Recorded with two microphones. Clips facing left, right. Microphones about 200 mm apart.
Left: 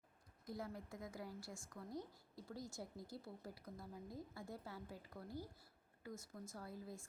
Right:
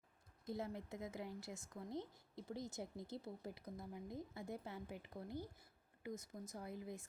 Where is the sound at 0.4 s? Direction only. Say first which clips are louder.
Right 3 dB; 25° right (ahead or behind).